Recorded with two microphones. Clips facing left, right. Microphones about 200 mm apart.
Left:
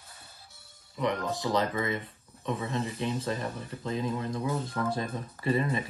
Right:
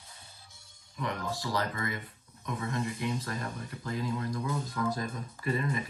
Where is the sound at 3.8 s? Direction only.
20° left (ahead or behind).